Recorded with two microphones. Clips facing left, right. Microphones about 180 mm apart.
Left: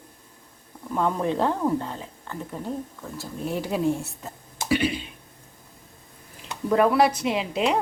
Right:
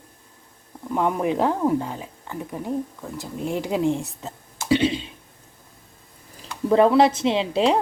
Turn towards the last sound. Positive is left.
turn(degrees=-30)  # may be behind; listen again after turning